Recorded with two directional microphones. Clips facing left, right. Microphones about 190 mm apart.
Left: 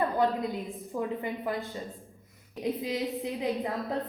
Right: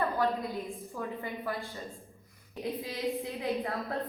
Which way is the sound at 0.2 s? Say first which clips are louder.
Left 3 dB; 20° left (ahead or behind).